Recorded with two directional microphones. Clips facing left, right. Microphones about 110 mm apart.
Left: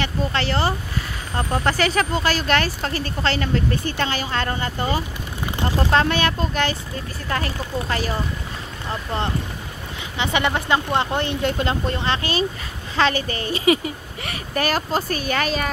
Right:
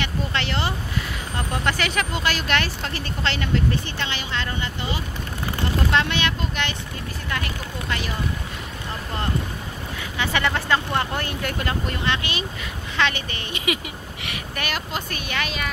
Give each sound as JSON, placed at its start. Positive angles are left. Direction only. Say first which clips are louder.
{"t": 0.0, "sound": "vehicle", "louder": "left 3 dB", "side_deg": 35}
{"t": 1.5, "sound": "speech", "louder": "left 4 dB", "side_deg": 35}
{"t": 10.1, "sound": "speech", "louder": "left 2 dB", "side_deg": 20}